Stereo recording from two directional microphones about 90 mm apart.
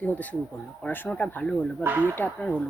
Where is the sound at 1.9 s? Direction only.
25° right (ahead or behind).